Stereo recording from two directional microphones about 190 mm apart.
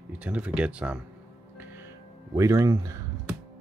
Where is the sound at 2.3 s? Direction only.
15° right (ahead or behind).